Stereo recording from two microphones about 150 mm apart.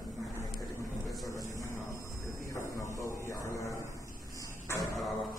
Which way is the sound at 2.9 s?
20° left (ahead or behind).